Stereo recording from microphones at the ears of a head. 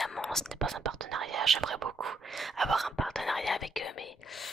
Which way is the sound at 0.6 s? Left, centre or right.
Right.